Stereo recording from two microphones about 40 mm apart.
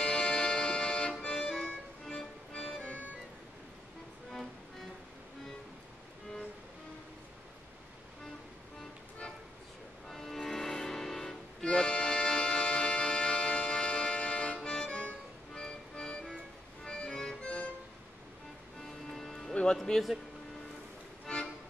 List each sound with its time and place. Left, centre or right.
0.0 s music: left
2.8 s organ: left
4.3 s music: centre
10.0 s music: centre
11.6 s music: left
18.8 s music: centre
19.8 s speech: centre
21.3 s music: centre